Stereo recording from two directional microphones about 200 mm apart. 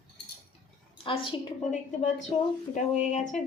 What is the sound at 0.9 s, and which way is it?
A woman's voice, 25° left (ahead or behind).